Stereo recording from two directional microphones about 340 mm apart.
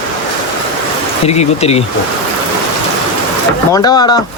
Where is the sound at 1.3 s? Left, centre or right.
Centre.